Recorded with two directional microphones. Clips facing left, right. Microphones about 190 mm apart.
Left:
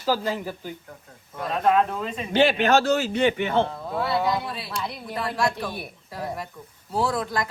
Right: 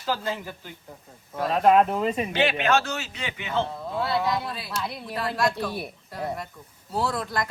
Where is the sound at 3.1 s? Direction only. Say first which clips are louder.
Left 8 dB; 55° left (ahead or behind).